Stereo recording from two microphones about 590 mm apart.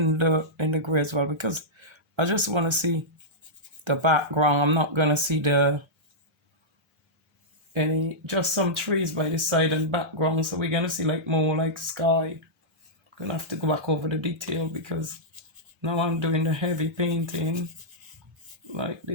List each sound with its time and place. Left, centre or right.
0.0 s speech: right
7.7 s speech: right
18.7 s speech: right